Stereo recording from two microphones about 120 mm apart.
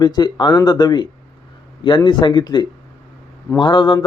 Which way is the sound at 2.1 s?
40° left (ahead or behind).